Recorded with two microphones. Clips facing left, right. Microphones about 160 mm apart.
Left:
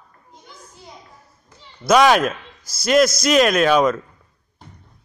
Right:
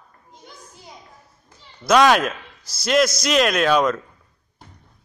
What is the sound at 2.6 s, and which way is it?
Speech, 45° left (ahead or behind).